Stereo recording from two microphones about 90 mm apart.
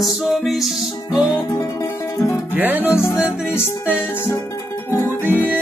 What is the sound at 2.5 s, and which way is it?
Music, 20° right (ahead or behind).